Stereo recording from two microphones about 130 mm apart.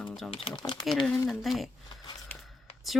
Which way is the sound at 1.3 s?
Centre (ahead or behind).